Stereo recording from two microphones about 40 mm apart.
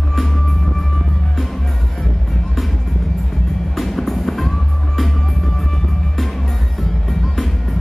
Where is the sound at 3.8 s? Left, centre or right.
Centre.